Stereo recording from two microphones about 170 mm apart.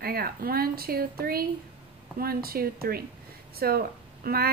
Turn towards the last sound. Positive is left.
turn(degrees=-65)  # may be behind; listen again after turning